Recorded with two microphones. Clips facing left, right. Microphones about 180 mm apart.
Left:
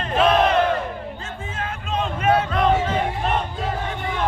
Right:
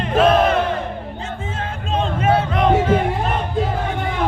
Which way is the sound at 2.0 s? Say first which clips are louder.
Right 2 dB; 30° right (ahead or behind).